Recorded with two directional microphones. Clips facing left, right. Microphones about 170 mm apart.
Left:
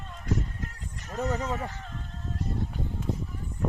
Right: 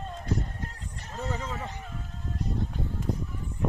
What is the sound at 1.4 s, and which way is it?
Speech, 25° right (ahead or behind).